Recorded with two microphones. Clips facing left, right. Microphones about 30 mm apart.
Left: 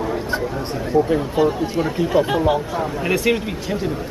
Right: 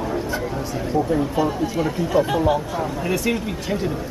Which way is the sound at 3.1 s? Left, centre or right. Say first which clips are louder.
Left 5 dB; left.